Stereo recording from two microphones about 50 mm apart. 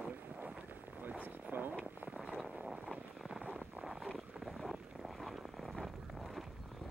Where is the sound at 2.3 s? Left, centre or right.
Centre.